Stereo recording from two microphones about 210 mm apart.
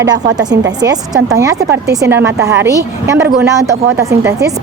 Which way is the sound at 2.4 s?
55° right (ahead or behind).